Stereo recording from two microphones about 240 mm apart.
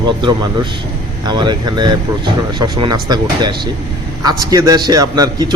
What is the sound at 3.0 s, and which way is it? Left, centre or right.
A man's voice, centre.